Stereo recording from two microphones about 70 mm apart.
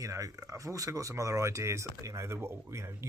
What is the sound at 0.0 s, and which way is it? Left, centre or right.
Speech, right.